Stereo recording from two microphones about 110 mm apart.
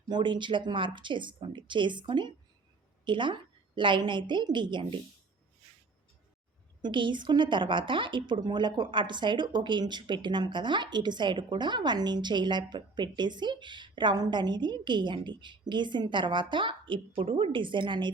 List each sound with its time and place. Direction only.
0.1 s a woman's voice: 45° right (ahead or behind)
6.8 s a woman's voice: 45° right (ahead or behind)